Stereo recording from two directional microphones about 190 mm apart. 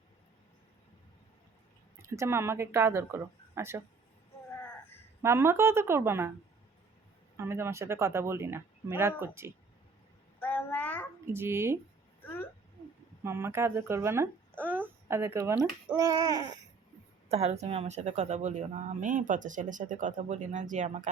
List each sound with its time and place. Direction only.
2.0 s speech: 15° right (ahead or behind)
5.2 s speech: 15° right (ahead or behind)
7.3 s speech: 15° right (ahead or behind)
10.4 s a sound: 10° left (ahead or behind)
11.3 s speech: 10° right (ahead or behind)
12.2 s a sound: 10° left (ahead or behind)
13.2 s speech: 15° right (ahead or behind)
14.6 s a sound: 10° right (ahead or behind)
16.0 s speech: 15° right (ahead or behind)
17.2 s speech: 35° right (ahead or behind)